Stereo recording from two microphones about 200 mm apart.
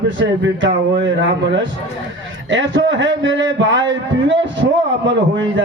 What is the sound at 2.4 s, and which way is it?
A man's voice, 65° right (ahead or behind).